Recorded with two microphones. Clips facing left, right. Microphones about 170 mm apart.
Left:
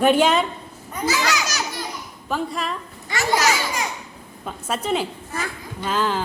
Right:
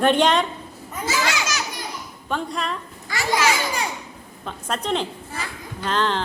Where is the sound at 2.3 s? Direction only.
Centre (ahead or behind).